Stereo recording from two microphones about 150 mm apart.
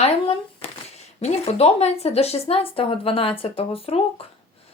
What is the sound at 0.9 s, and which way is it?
A woman's voice, 45° left (ahead or behind).